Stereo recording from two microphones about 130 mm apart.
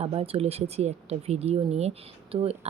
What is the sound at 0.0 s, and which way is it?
Speech, 50° right (ahead or behind).